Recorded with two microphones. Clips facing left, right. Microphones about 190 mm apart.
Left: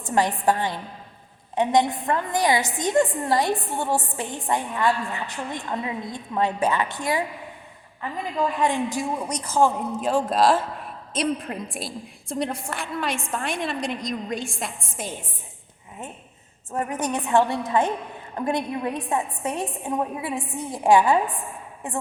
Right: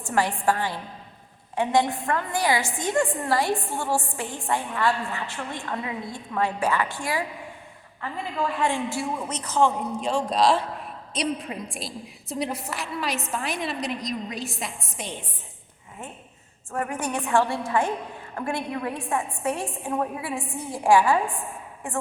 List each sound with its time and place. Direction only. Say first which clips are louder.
0.0 s a woman's voice: left 2 dB; 20° left (ahead or behind)
8.5 s a man's voice: left 2 dB; 15° left (ahead or behind); by 15.3 s centre (ahead or behind)
16.7 s a woman's voice: left 2 dB; 20° left (ahead or behind)